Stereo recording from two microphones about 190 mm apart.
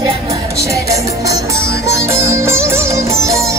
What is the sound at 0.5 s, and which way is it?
Music, 15° right (ahead or behind).